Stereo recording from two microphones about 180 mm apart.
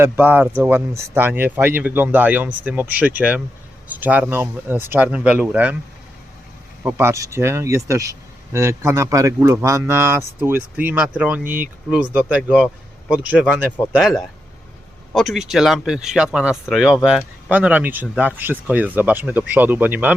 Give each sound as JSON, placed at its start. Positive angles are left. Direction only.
{"t": 0.0, "sound": "a man's voice", "side_deg": -10}
{"t": 6.8, "sound": "a man's voice", "side_deg": -10}